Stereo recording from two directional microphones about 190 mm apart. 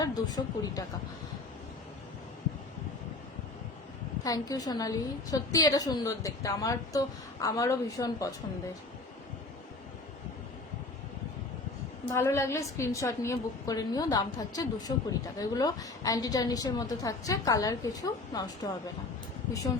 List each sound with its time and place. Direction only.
0.0 s a woman's voice: 20° left (ahead or behind)
4.2 s a woman's voice: 20° left (ahead or behind)
12.1 s a woman's voice: 15° left (ahead or behind)